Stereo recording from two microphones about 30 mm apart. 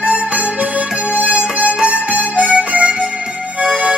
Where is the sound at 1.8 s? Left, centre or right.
Right.